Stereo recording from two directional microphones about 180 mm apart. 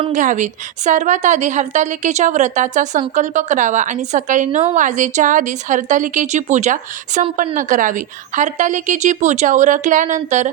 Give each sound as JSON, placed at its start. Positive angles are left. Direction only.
{"t": 0.1, "sound": "a woman's voice", "side_deg": -45}